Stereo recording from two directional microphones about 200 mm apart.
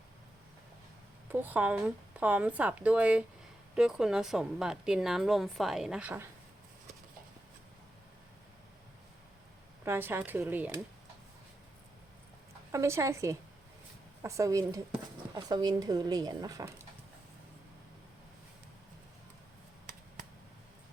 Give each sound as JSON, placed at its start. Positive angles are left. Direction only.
{"t": 1.3, "sound": "a woman's voice", "side_deg": -10}
{"t": 9.8, "sound": "speech", "side_deg": -10}
{"t": 12.7, "sound": "speech", "side_deg": -15}